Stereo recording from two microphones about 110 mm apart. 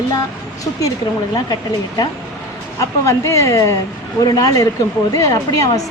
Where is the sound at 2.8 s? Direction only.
25° left (ahead or behind).